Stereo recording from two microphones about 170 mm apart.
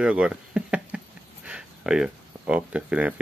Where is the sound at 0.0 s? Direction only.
5° right (ahead or behind).